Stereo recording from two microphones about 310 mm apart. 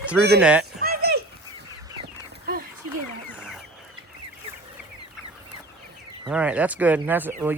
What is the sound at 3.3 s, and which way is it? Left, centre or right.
Goose, centre.